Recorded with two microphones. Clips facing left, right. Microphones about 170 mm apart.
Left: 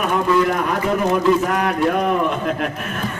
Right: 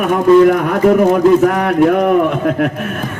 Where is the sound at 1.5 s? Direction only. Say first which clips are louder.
Right 7 dB; 60° right (ahead or behind).